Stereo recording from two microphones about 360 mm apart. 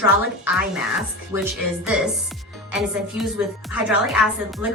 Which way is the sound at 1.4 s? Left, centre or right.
Centre.